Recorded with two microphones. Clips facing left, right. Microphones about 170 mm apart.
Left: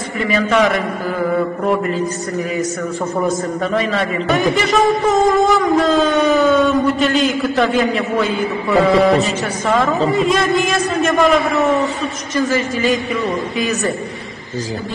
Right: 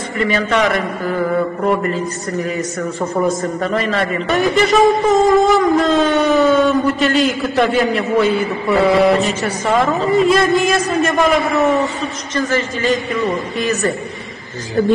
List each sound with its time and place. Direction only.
0.2 s a man's voice: centre (ahead or behind)
3.2 s a man's voice: centre (ahead or behind)
12.4 s a woman's voice: 15° left (ahead or behind)
13.1 s a man's voice: centre (ahead or behind)